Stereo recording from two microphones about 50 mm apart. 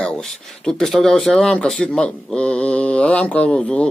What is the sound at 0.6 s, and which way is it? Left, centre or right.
Speech, centre.